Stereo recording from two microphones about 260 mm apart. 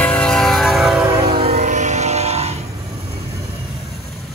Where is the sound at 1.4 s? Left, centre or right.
Right.